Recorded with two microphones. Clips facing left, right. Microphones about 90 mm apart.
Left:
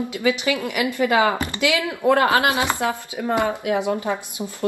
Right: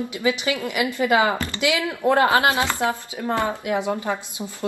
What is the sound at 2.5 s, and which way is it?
Speech, 20° left (ahead or behind).